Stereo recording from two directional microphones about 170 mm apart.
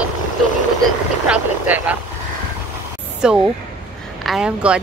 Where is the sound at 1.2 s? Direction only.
5° right (ahead or behind).